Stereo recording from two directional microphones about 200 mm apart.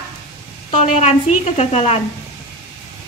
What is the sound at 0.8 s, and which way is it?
A woman's voice, 35° left (ahead or behind).